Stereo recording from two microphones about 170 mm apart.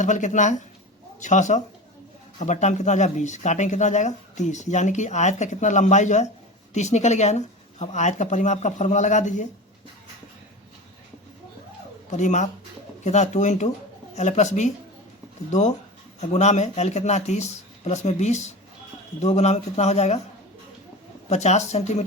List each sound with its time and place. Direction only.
0.0 s speech: 45° left (ahead or behind)
12.1 s speech: 45° left (ahead or behind)
16.2 s speech: 40° left (ahead or behind)
21.2 s speech: 40° left (ahead or behind)